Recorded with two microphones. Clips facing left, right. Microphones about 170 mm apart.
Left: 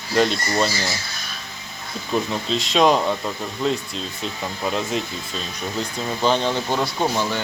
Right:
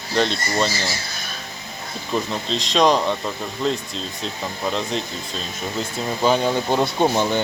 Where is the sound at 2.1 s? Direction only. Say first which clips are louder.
Left 1 dB; 5° left (ahead or behind).